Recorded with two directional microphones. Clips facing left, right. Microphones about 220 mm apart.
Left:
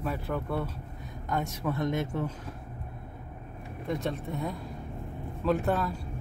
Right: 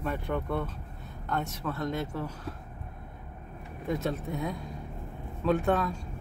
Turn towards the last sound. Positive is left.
turn(degrees=0)  # may be behind; listen again after turning